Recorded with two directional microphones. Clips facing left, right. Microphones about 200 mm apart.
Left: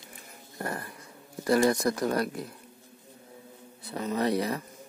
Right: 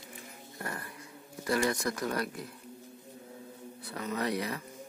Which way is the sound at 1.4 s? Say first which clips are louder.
Left 6 dB; 35° left (ahead or behind).